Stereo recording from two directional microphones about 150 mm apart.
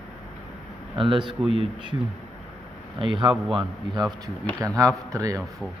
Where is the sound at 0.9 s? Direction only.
35° right (ahead or behind).